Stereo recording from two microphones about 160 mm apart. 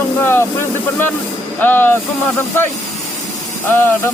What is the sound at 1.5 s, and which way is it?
Speech, 10° left (ahead or behind).